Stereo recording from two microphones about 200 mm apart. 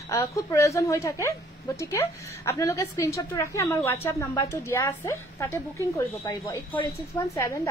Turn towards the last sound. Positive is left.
turn(degrees=15)  # may be behind; listen again after turning